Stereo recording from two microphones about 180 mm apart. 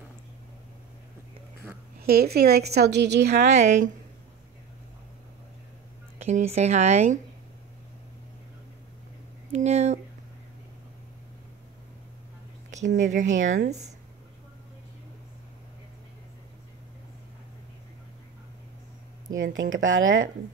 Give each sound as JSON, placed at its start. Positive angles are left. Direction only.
{"t": 2.0, "sound": "a woman's voice", "side_deg": -60}
{"t": 3.4, "sound": "speech", "side_deg": -40}
{"t": 6.1, "sound": "speech", "side_deg": -40}
{"t": 9.5, "sound": "speech", "side_deg": -40}
{"t": 13.0, "sound": "speech", "side_deg": -45}
{"t": 19.3, "sound": "speech", "side_deg": -90}